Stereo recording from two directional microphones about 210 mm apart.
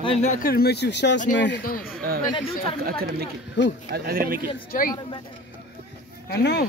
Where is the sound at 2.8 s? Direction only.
45° right (ahead or behind).